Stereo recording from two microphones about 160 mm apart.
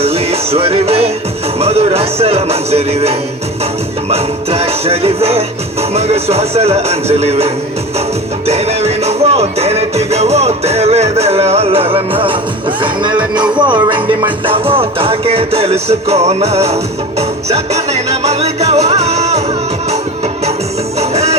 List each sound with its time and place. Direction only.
0.0 s music: 40° right (ahead or behind)
12.8 s speech: 30° right (ahead or behind)
14.4 s music: 35° right (ahead or behind)
21.0 s music: 40° right (ahead or behind)